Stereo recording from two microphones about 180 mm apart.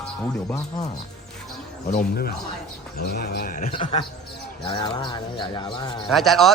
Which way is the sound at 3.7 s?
30° left (ahead or behind).